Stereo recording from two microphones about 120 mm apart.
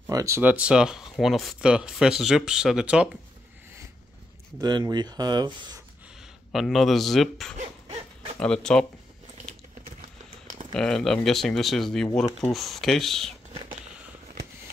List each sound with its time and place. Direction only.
0.1 s speech: 25° right (ahead or behind)
0.4 s speech: 10° right (ahead or behind)
4.6 s speech: 35° right (ahead or behind)
6.5 s speech: centre (ahead or behind)
10.4 s a sound: 90° right
10.7 s speech: 5° left (ahead or behind)
13.5 s a sound: 60° right (ahead or behind)